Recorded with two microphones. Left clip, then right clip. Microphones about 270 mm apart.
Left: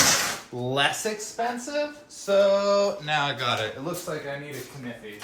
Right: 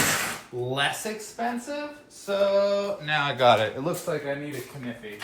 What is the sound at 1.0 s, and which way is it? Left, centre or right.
Speech, left.